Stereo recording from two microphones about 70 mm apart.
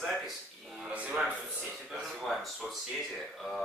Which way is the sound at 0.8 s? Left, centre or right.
Centre.